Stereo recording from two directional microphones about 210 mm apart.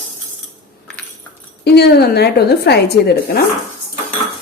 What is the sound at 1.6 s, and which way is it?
A woman's voice, 50° left (ahead or behind).